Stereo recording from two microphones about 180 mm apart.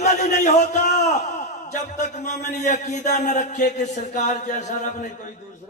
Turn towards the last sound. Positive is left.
turn(degrees=40)  # may be behind; listen again after turning